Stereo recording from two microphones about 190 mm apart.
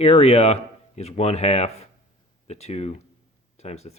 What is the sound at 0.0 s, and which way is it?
Speech, 35° left (ahead or behind).